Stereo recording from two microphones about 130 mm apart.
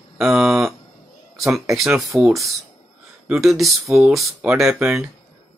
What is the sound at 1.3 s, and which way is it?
Speech, centre (ahead or behind).